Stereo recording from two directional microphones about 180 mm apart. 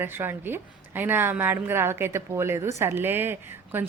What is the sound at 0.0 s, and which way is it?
A woman's voice, 10° right (ahead or behind).